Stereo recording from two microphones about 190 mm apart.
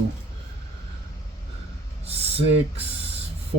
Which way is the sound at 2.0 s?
30° right (ahead or behind).